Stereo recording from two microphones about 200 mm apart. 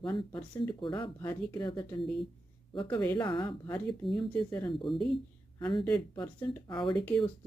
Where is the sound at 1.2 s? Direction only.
10° left (ahead or behind).